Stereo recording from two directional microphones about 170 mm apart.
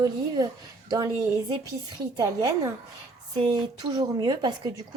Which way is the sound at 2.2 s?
20° right (ahead or behind).